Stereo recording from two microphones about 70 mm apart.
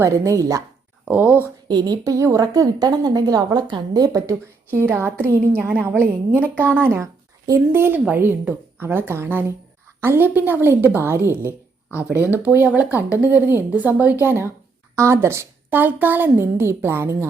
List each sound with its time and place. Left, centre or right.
0.0 s a woman's voice: right
1.0 s speech: right
1.6 s a woman's voice: right
4.7 s a woman's voice: right
11.4 s a sound: left
12.1 s speech: right
14.9 s a woman's voice: right
15.7 s speech: right